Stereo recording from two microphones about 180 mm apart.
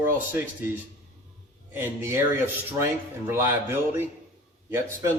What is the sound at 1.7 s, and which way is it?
A man's voice, 15° right (ahead or behind).